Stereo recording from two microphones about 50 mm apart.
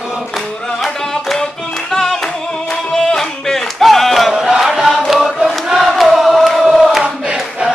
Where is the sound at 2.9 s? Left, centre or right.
Centre.